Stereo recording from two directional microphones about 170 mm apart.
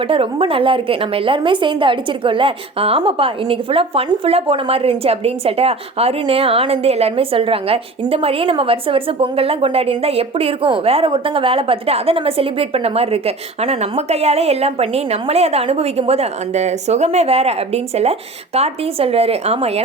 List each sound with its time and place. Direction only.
0.1 s a woman's voice: 35° right (ahead or behind)